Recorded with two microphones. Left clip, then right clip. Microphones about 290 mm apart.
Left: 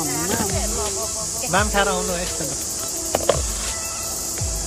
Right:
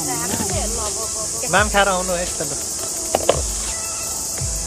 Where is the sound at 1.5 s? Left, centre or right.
Centre.